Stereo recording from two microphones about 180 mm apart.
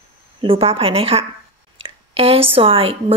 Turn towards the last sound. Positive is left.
turn(degrees=-30)  # may be behind; listen again after turning